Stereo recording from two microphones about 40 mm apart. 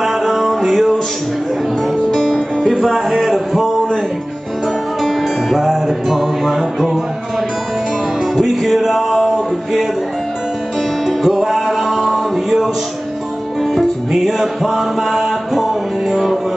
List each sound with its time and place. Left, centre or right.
0.0 s music: centre
2.1 s music: centre
2.7 s a sound: centre
5.0 s music: centre
8.4 s music: centre
11.2 s music: centre
13.7 s music: centre